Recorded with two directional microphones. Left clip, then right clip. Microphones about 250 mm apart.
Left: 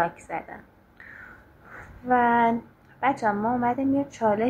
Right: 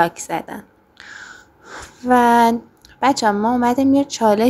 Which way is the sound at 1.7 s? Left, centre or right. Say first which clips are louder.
Right 7 dB; right.